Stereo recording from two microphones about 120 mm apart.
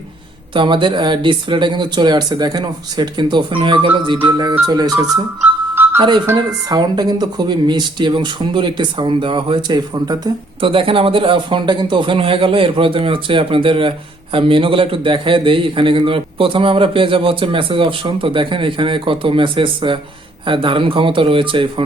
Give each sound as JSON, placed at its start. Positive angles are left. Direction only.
{"t": 0.5, "sound": "speech", "side_deg": -40}
{"t": 5.7, "sound": "music", "side_deg": -15}
{"t": 6.0, "sound": "speech", "side_deg": -40}
{"t": 10.6, "sound": "a man's voice", "side_deg": -45}